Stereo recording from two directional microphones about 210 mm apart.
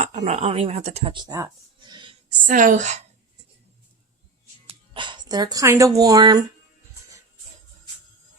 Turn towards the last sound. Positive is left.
turn(degrees=-20)  # may be behind; listen again after turning